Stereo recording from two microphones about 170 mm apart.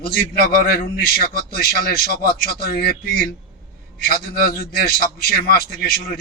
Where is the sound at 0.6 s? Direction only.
65° left (ahead or behind).